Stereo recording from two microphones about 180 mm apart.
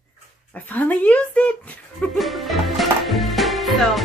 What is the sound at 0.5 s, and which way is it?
Speech, 10° left (ahead or behind).